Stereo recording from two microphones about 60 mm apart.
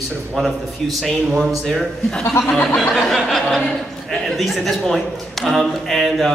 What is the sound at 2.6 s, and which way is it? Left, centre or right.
A man's voice, centre.